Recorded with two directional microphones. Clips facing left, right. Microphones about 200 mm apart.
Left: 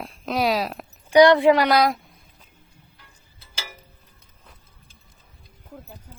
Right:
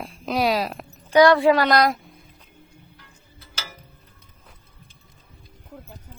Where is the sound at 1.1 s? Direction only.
20° left (ahead or behind).